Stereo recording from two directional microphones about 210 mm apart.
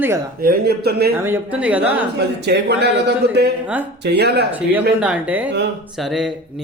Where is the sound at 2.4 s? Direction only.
55° right (ahead or behind).